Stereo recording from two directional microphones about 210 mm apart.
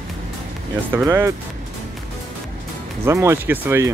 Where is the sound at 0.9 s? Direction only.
10° right (ahead or behind).